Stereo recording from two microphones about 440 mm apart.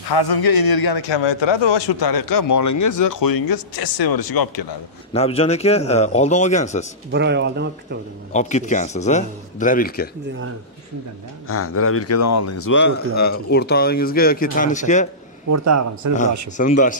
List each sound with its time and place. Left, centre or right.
0.1 s a man's voice: left
5.1 s a man's voice: centre
7.1 s speech: right
8.3 s a man's voice: centre
11.4 s speech: left
15.5 s a man's voice: right
16.5 s a man's voice: centre